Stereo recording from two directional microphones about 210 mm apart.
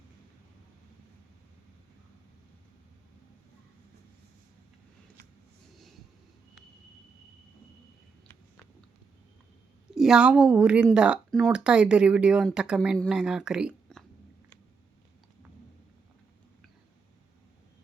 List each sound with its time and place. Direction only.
9.9 s speech: 5° right (ahead or behind)